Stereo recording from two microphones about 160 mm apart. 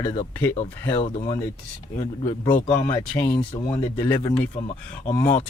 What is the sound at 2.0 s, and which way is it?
Speech, 45° left (ahead or behind).